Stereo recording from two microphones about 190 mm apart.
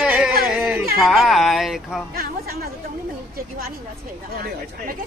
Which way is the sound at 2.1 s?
50° right (ahead or behind).